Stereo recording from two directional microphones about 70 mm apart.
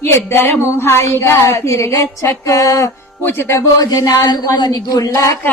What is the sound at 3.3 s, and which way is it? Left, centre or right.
Music, left.